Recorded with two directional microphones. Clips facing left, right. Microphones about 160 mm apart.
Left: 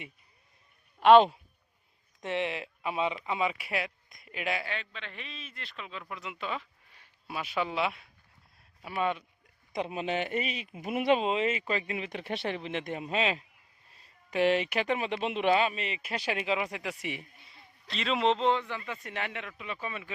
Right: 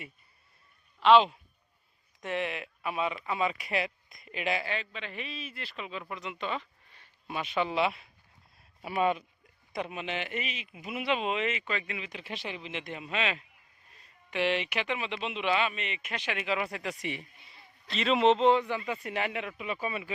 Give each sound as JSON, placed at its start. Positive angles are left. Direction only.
{"t": 0.9, "sound": "speech", "side_deg": 50}
{"t": 2.2, "sound": "speech", "side_deg": 25}
{"t": 8.8, "sound": "speech", "side_deg": -15}
{"t": 9.7, "sound": "speech", "side_deg": 30}
{"t": 11.2, "sound": "speech", "side_deg": 30}
{"t": 11.9, "sound": "speech", "side_deg": 50}
{"t": 16.6, "sound": "speech", "side_deg": 15}
{"t": 17.5, "sound": "a man's voice", "side_deg": 0}